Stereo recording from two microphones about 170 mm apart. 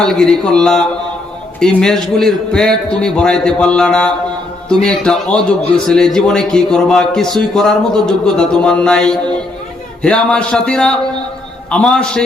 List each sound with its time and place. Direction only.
0.0 s a man's voice: 5° left (ahead or behind)